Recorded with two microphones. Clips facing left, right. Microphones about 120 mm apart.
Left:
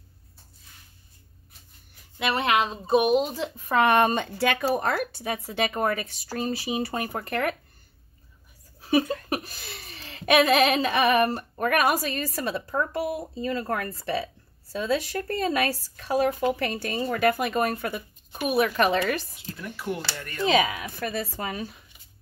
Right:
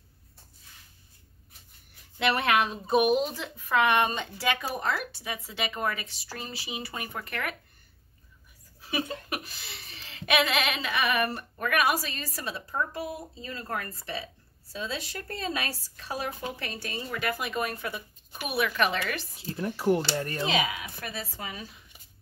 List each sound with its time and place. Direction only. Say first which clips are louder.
2.1 s speech: left 1 dB; 15° left (ahead or behind); by 7.5 s 40° left (ahead or behind)
8.9 s speech: left 9 dB; 35° left (ahead or behind)
19.3 s speech: right 5 dB; 35° right (ahead or behind)
20.5 s speech: left 8 dB; 35° left (ahead or behind)
21.1 s speech: left 7 dB; 50° left (ahead or behind)